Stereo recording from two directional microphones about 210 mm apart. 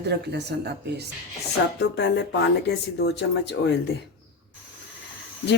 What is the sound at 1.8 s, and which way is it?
Speech, 55° left (ahead or behind).